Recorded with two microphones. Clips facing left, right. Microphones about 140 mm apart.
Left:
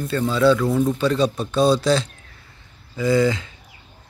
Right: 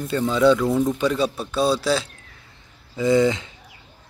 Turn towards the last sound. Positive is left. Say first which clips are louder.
# right 1 dB
turn(degrees=-20)  # may be behind; listen again after turning